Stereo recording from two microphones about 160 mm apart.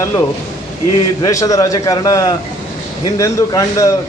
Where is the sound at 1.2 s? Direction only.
20° left (ahead or behind).